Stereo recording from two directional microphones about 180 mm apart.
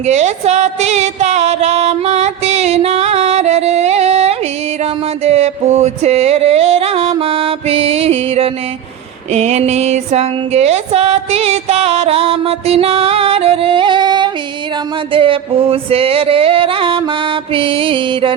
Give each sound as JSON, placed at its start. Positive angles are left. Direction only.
{"t": 0.0, "sound": "music", "side_deg": -40}